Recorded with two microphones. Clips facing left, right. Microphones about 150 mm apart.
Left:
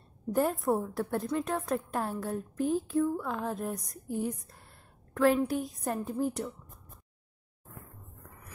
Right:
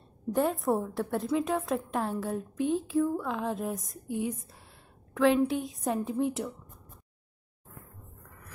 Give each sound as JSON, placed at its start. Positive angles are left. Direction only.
{"t": 0.3, "sound": "a woman's voice", "side_deg": 0}
{"t": 4.2, "sound": "a sound", "side_deg": 0}
{"t": 5.5, "sound": "a woman's voice", "side_deg": 0}